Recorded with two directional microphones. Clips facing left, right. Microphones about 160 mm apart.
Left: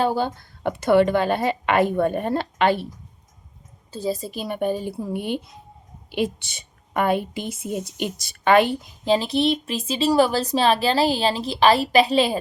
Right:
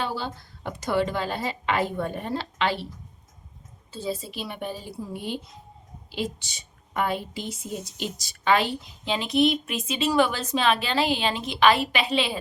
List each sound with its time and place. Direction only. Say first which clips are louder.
0.0 s a woman's voice: left 8 dB; 50° left (ahead or behind)
3.9 s a woman's voice: left 5 dB; 40° left (ahead or behind); by 8.7 s 55° left (ahead or behind)
9.0 s speech: left 3 dB; 35° left (ahead or behind)